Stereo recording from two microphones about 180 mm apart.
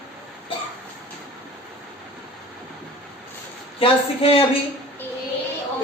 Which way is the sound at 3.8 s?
30° left (ahead or behind).